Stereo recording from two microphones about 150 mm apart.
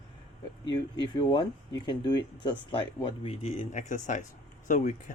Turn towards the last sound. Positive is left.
turn(degrees=60)  # may be behind; listen again after turning